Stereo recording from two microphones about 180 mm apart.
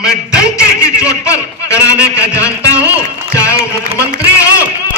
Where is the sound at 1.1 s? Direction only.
15° left (ahead or behind).